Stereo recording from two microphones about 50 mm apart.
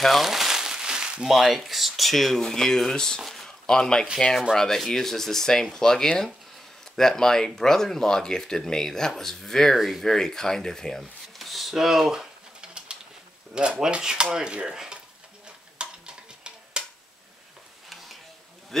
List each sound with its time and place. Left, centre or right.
0.0 s speech: centre
12.5 s pigeon: centre
13.6 s dishes: centre
15.4 s stir: centre